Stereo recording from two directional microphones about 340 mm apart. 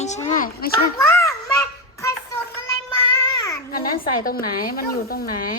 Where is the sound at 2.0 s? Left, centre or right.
Centre.